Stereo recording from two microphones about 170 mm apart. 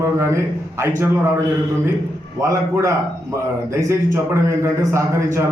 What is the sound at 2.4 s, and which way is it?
A man's voice, 20° right (ahead or behind).